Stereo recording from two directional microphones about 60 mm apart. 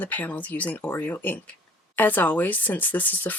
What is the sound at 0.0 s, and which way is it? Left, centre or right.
Speech, left.